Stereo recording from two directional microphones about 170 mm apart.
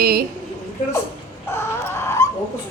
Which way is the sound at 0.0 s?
60° right (ahead or behind).